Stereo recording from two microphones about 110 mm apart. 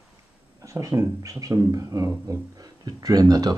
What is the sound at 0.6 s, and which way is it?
Speech, 30° right (ahead or behind).